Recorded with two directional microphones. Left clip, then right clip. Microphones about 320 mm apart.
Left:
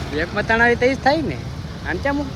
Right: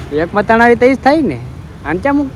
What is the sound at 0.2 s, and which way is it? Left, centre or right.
Speech, centre.